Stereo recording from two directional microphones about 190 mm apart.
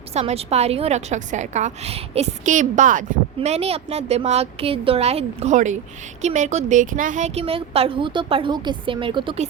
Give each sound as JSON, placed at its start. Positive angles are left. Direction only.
{"t": 0.1, "sound": "a woman's voice", "side_deg": -35}